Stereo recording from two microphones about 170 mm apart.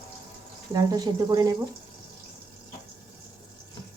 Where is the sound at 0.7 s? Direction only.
25° right (ahead or behind).